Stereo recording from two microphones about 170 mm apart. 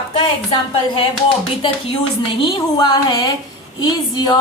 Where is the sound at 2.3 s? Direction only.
30° left (ahead or behind).